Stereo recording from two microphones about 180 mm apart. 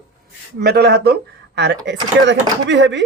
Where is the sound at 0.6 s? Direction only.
65° right (ahead or behind).